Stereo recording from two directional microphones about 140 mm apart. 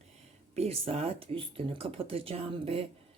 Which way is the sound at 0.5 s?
45° right (ahead or behind).